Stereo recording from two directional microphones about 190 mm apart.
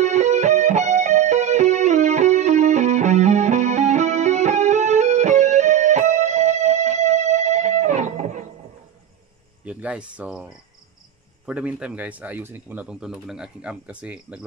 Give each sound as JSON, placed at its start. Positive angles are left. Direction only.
{"t": 0.0, "sound": "music", "side_deg": -35}
{"t": 9.7, "sound": "speech", "side_deg": -5}